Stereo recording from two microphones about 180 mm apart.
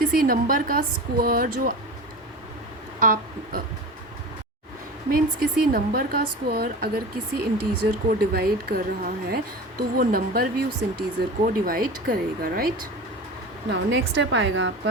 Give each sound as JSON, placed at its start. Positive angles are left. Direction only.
{"t": 0.2, "sound": "a woman's voice", "side_deg": -50}
{"t": 3.0, "sound": "speech", "side_deg": -50}
{"t": 5.1, "sound": "a woman's voice", "side_deg": -55}
{"t": 13.7, "sound": "a woman's voice", "side_deg": -85}